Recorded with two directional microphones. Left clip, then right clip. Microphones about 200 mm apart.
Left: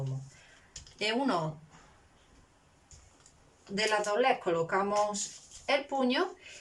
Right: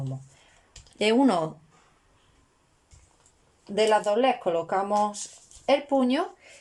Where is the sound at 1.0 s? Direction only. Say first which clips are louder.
Right 8 dB; 45° right (ahead or behind).